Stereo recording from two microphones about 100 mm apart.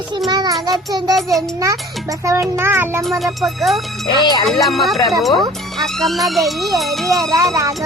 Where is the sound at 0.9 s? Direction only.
40° right (ahead or behind).